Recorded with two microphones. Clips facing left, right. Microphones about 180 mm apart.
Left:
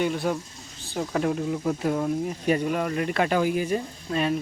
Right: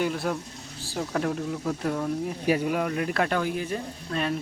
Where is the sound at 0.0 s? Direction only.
Centre (ahead or behind).